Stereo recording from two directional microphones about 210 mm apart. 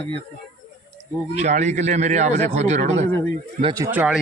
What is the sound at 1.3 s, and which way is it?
A man's voice, 35° right (ahead or behind).